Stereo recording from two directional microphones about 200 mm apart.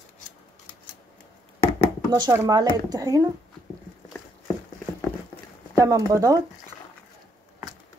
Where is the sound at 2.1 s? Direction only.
20° right (ahead or behind).